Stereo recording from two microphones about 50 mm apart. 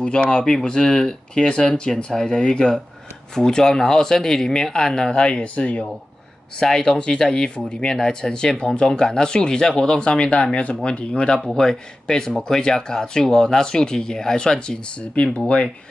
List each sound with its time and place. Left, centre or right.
0.0 s speech: centre
6.6 s speech: centre